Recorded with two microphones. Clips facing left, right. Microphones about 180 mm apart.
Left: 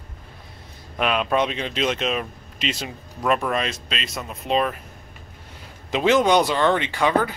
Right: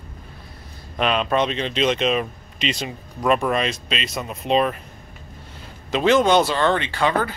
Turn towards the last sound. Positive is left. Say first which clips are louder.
# left 1 dB
turn(degrees=15)  # may be behind; listen again after turning